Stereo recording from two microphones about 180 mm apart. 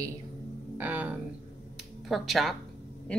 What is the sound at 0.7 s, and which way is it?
Speech, 10° right (ahead or behind).